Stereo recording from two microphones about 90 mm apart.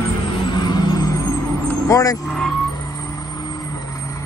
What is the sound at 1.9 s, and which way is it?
Speech, 40° left (ahead or behind).